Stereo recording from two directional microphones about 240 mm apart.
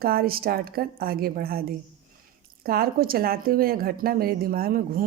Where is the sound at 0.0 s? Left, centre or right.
Right.